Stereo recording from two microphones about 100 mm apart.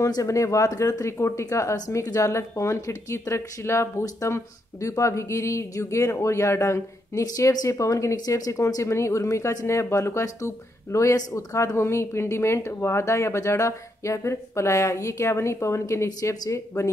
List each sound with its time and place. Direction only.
0.0 s speech: 35° left (ahead or behind)